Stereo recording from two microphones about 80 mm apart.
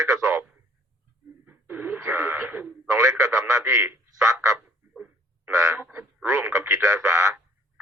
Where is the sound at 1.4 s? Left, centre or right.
Right.